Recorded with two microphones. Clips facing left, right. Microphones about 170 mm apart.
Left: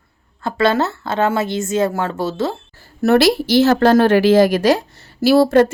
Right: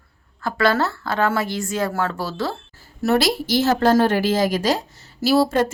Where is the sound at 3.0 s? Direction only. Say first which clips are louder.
Left 6 dB; 65° left (ahead or behind).